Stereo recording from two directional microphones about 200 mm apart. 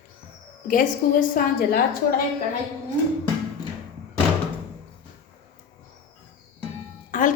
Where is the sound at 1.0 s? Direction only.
40° left (ahead or behind).